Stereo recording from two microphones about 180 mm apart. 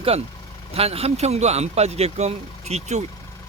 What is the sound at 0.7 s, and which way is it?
Speech, 35° right (ahead or behind).